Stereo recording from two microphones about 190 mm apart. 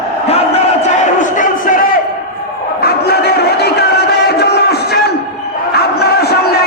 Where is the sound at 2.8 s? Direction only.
60° left (ahead or behind).